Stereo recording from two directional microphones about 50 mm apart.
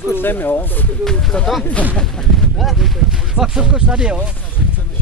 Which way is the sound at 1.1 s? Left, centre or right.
Centre.